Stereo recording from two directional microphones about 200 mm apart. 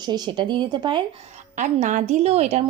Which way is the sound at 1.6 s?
40° right (ahead or behind).